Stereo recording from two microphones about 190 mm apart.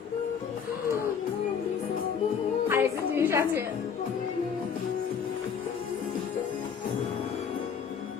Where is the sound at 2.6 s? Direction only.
10° right (ahead or behind).